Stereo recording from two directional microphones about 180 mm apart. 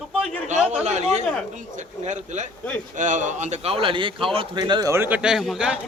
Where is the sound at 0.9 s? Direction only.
40° right (ahead or behind).